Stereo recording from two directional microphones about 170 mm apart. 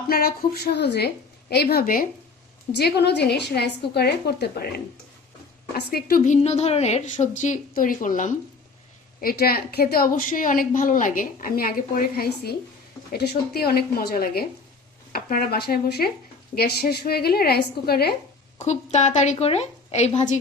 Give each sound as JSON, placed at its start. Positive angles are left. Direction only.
{"t": 0.1, "sound": "a woman's voice", "side_deg": 65}
{"t": 2.7, "sound": "a woman's voice", "side_deg": 75}
{"t": 5.7, "sound": "a woman's voice", "side_deg": 60}
{"t": 9.2, "sound": "a woman's voice", "side_deg": 65}
{"t": 18.6, "sound": "a woman's voice", "side_deg": 45}